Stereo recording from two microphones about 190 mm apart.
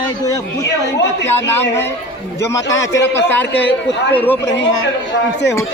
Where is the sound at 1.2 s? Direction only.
10° left (ahead or behind).